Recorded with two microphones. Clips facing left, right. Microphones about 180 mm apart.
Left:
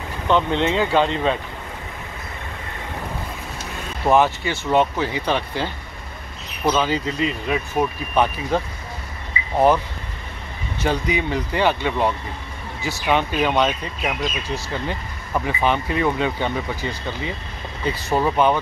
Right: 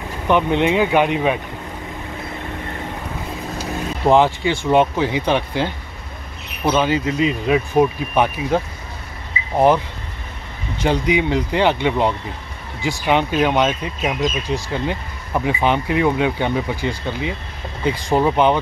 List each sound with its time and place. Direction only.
0.3 s speech: 15° right (ahead or behind)
4.0 s speech: 15° right (ahead or behind)
6.7 s speech: 10° right (ahead or behind)
10.8 s speech: 15° right (ahead or behind)